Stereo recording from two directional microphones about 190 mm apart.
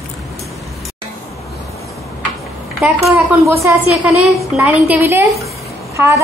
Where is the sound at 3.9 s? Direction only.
Centre (ahead or behind).